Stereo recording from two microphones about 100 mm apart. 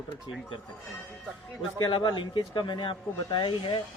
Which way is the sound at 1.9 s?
50° left (ahead or behind).